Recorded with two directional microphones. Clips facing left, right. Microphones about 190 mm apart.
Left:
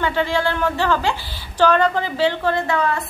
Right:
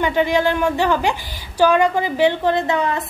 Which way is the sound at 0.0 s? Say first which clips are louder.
Right 3 dB; 15° right (ahead or behind).